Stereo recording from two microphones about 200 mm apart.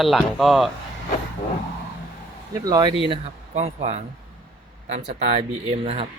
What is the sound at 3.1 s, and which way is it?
Speech, 35° right (ahead or behind).